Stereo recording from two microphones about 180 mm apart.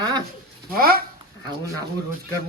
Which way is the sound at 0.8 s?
55° right (ahead or behind).